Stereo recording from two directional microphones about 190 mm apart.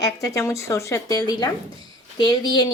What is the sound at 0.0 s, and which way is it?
Speech, 15° left (ahead or behind).